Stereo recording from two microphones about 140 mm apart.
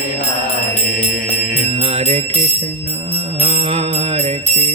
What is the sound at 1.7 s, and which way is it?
Jingle bell, 45° right (ahead or behind).